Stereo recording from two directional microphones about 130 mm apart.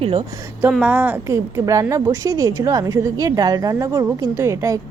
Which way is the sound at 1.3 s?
25° right (ahead or behind).